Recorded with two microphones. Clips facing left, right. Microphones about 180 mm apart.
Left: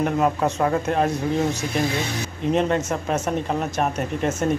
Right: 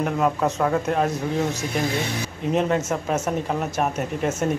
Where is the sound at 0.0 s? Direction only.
Centre (ahead or behind).